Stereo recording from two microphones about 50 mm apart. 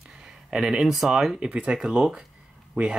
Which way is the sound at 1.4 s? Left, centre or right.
Right.